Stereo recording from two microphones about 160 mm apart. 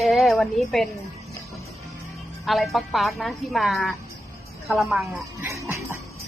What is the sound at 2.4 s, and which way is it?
A woman's voice, centre (ahead or behind).